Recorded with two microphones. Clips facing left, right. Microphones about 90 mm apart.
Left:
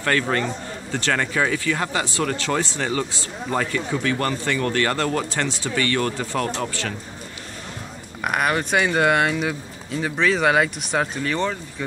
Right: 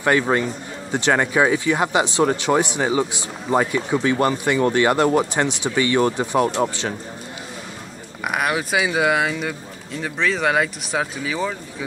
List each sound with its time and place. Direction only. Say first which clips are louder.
0.0 s a man's voice: right 3 dB; 15° right (ahead or behind)
8.2 s speech: even; centre (ahead or behind)